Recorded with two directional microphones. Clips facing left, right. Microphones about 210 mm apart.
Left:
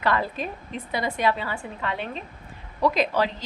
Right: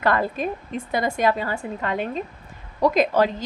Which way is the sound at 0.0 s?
50° right (ahead or behind).